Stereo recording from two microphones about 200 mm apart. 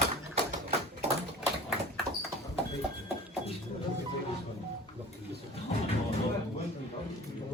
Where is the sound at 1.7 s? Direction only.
Centre (ahead or behind).